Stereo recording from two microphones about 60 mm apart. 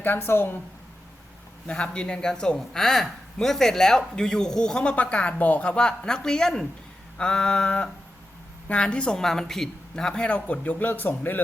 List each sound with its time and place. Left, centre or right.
0.0 s a woman's voice: left
1.6 s a man's voice: centre